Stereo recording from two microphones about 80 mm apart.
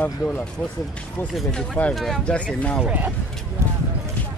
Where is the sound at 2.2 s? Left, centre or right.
Centre.